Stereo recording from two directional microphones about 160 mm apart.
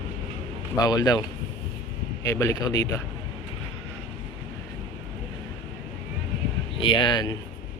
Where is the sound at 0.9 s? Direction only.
25° left (ahead or behind).